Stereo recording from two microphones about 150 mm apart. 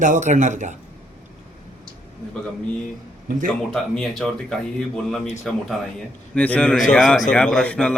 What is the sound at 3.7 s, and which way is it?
A man's voice, centre (ahead or behind).